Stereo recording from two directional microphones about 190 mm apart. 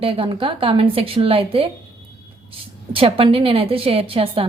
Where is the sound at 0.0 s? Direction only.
30° right (ahead or behind).